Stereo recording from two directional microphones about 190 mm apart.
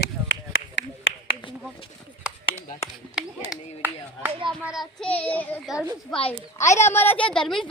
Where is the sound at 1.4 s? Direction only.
25° left (ahead or behind).